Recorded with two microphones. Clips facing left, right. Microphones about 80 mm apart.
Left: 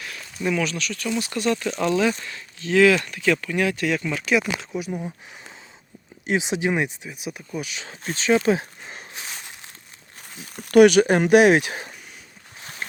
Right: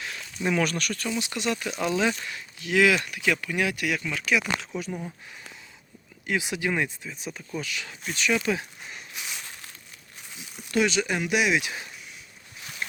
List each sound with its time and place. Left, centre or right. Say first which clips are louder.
0.6 s speech: even; right
1.2 s speech: left 5 dB; right
4.3 s speech: left 3 dB; centre
6.2 s speech: left 5 dB; left
8.0 s a sound: left 6 dB; left
10.3 s speech: left 12 dB; left
12.5 s a sound: left 1 dB; left